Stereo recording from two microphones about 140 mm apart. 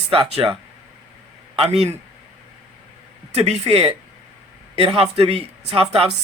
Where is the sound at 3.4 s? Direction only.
45° right (ahead or behind).